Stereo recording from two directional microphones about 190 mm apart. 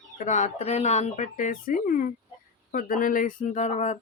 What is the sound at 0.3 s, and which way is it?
Speech, 40° left (ahead or behind).